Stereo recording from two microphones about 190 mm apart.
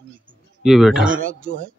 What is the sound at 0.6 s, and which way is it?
Speech, centre (ahead or behind).